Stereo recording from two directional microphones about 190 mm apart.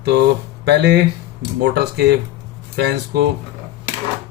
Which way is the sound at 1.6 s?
60° right (ahead or behind).